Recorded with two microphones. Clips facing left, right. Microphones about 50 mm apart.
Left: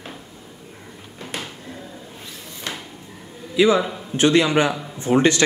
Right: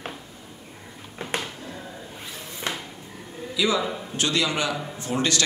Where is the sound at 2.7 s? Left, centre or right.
Centre.